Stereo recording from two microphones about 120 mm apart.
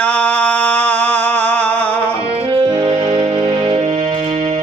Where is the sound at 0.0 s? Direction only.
10° left (ahead or behind).